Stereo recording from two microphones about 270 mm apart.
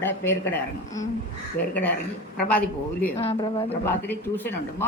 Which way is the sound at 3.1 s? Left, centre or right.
Left.